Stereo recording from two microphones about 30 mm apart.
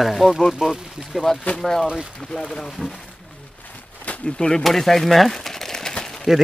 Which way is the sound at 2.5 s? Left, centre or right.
Centre.